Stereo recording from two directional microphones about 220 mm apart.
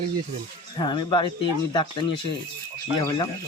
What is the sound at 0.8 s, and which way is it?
A man's voice, 20° left (ahead or behind).